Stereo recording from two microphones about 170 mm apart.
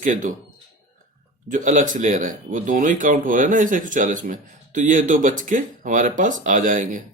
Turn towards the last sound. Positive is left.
turn(degrees=-50)  # may be behind; listen again after turning